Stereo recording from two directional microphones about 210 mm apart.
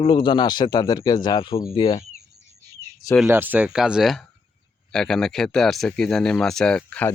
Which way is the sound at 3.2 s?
10° right (ahead or behind).